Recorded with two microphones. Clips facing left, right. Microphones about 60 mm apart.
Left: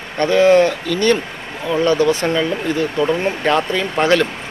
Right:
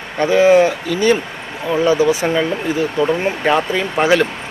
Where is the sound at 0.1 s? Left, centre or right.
Centre.